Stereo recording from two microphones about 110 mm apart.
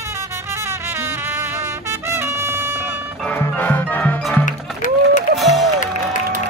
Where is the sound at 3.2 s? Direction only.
15° left (ahead or behind).